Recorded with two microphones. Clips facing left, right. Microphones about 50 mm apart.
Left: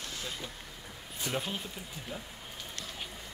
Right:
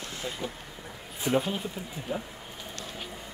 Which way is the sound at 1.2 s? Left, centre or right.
Centre.